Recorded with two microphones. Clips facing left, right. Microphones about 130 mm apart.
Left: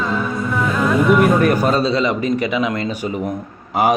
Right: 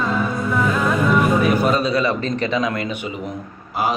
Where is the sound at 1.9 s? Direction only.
20° left (ahead or behind).